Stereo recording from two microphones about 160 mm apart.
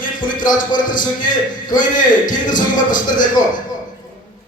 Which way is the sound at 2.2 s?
55° left (ahead or behind).